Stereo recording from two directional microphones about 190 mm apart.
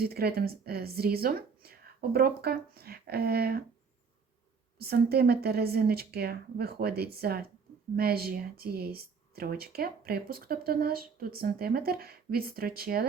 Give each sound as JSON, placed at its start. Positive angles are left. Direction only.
{"t": 0.0, "sound": "speech", "side_deg": -55}
{"t": 4.8, "sound": "a woman's voice", "side_deg": -55}